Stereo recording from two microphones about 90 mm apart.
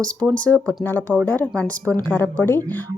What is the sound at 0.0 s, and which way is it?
A woman's voice, 15° left (ahead or behind).